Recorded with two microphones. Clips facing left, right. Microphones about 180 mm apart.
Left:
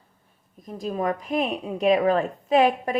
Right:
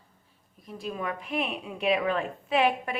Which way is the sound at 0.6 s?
40° left (ahead or behind).